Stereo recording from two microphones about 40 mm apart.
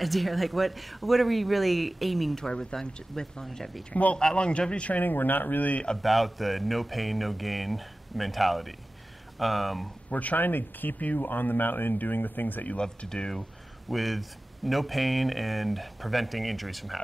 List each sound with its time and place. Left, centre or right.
0.0 s speech: centre
2.3 s speech: centre
3.9 s speech: left
4.4 s a man's voice: left
5.0 s speech: left
6.0 s speech: centre
10.0 s speech: left
10.4 s speech: left
12.7 s a man's voice: left
13.4 s speech: centre